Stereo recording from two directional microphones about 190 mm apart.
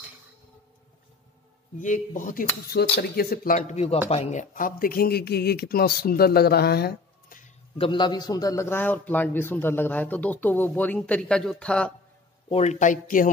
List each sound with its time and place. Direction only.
1.8 s speech: 45° left (ahead or behind)
7.7 s a man's voice: 25° left (ahead or behind); by 11.9 s 5° left (ahead or behind)
12.4 s speech: 35° left (ahead or behind)